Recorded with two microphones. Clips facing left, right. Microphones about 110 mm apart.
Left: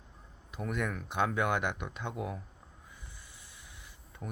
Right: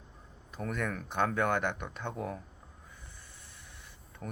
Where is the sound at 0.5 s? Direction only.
10° left (ahead or behind).